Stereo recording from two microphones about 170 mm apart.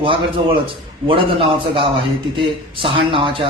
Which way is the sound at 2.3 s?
30° right (ahead or behind).